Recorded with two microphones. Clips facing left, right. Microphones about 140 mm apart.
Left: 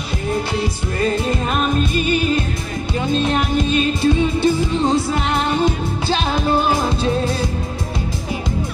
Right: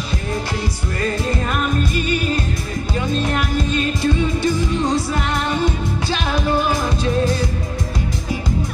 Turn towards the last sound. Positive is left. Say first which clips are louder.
# left 2 dB
turn(degrees=30)  # may be behind; listen again after turning